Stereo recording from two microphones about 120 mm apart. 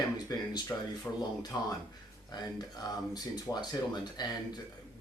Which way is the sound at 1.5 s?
30° left (ahead or behind).